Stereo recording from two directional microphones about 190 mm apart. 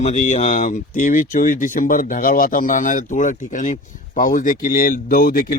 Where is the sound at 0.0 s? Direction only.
40° left (ahead or behind).